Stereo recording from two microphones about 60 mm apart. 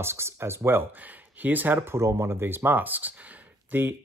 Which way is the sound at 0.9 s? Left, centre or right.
Right.